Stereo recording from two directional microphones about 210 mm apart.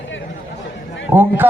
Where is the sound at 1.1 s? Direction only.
10° right (ahead or behind).